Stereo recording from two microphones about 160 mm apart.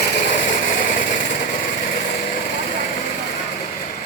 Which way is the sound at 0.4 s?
55° left (ahead or behind).